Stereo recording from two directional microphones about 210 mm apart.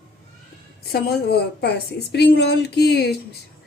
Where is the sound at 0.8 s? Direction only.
45° left (ahead or behind).